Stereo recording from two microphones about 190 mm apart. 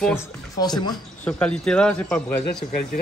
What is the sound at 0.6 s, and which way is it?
Speech, 20° left (ahead or behind).